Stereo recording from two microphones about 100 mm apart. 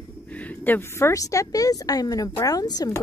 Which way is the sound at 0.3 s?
15° left (ahead or behind).